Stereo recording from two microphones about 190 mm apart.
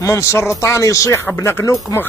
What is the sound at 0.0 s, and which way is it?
Speech, 15° left (ahead or behind).